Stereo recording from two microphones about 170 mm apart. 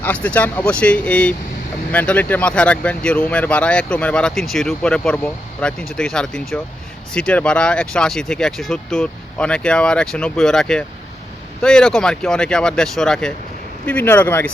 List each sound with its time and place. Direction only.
0.0 s speech: 10° left (ahead or behind)